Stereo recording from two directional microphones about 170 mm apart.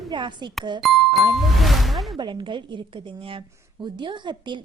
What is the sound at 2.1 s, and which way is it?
A woman's voice, 25° right (ahead or behind).